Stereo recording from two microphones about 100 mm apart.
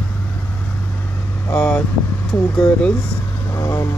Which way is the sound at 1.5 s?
10° left (ahead or behind).